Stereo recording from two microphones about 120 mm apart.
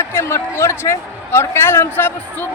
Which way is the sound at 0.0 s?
20° left (ahead or behind).